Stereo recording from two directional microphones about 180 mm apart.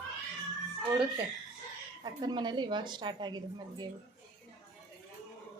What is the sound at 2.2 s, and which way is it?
Speech, 25° right (ahead or behind).